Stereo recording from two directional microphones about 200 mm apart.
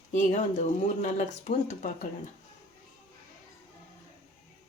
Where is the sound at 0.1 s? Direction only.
35° left (ahead or behind).